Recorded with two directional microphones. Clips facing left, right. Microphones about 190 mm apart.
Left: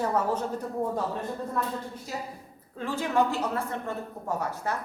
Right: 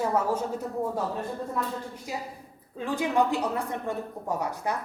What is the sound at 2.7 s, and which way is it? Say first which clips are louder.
A woman's voice: right 1 dB; 15° right (ahead or behind).